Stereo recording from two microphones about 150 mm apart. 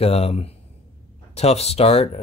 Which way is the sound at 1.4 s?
45° left (ahead or behind).